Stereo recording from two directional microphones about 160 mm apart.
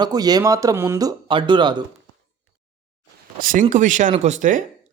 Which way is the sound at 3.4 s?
60° right (ahead or behind).